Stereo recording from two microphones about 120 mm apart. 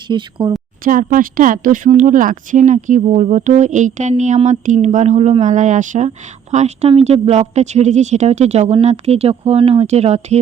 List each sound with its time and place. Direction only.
0.1 s speech: 40° right (ahead or behind)
1.1 s speech: 90° right
6.5 s speech: 70° right (ahead or behind)